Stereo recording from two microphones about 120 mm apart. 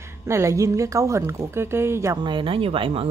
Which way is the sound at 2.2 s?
45° right (ahead or behind).